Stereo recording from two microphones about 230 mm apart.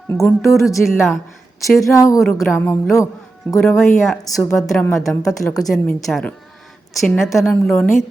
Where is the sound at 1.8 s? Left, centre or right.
Centre.